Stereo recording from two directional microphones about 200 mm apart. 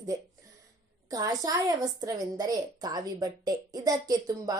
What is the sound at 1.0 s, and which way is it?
A woman's voice, 20° right (ahead or behind).